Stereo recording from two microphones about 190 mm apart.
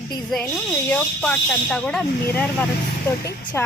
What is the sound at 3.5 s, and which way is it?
Speech, 15° left (ahead or behind).